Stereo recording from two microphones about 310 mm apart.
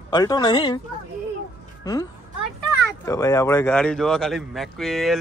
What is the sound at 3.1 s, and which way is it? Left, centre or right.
A man's voice, centre.